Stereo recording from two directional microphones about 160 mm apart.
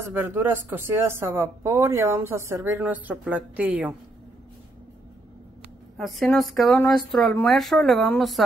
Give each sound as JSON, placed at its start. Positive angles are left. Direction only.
{"t": 0.0, "sound": "speech", "side_deg": -15}
{"t": 5.9, "sound": "a woman's voice", "side_deg": 0}